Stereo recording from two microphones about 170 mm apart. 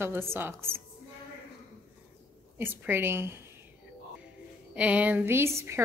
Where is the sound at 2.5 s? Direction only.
10° right (ahead or behind).